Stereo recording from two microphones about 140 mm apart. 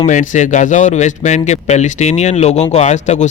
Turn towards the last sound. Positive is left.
turn(degrees=55)  # may be behind; listen again after turning